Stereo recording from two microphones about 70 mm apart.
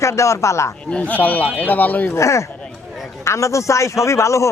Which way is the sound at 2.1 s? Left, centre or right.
Left.